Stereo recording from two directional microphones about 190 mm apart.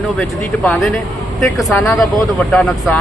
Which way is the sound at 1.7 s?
15° left (ahead or behind).